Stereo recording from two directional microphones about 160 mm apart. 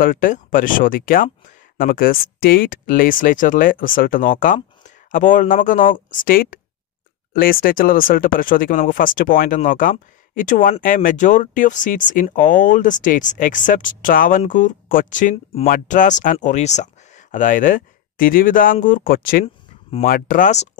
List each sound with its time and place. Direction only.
0.0 s speech: 60° left (ahead or behind)